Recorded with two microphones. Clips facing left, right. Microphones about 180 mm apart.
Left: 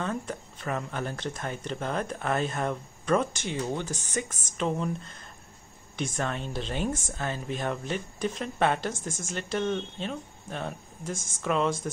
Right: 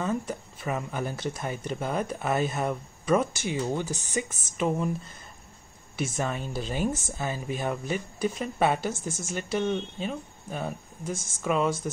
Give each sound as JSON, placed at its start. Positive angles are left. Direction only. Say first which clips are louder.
{"t": 0.0, "sound": "speech", "louder": "right 3 dB", "side_deg": -5}